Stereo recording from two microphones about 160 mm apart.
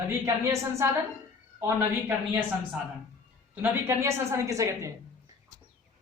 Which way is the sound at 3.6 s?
15° right (ahead or behind).